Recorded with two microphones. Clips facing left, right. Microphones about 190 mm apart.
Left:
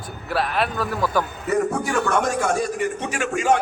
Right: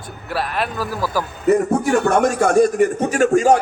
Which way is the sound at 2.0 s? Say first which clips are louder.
Right 5 dB; 55° right (ahead or behind).